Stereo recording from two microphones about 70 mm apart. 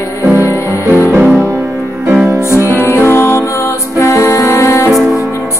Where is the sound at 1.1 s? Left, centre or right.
Centre.